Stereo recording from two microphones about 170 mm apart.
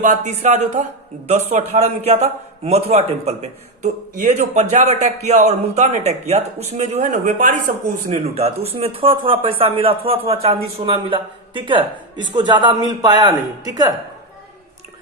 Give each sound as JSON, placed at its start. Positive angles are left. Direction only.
{"t": 0.0, "sound": "a man's voice", "side_deg": -45}
{"t": 8.0, "sound": "speech", "side_deg": -35}